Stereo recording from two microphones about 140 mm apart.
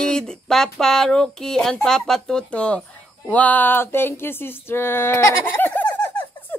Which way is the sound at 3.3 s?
10° left (ahead or behind).